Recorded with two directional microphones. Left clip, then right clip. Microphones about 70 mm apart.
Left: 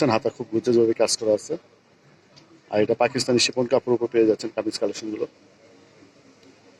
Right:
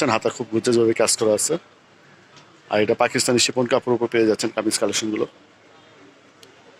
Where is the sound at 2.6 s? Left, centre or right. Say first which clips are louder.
Right 2 dB; centre.